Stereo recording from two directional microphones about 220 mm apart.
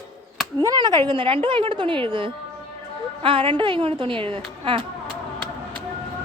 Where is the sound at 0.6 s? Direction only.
15° right (ahead or behind).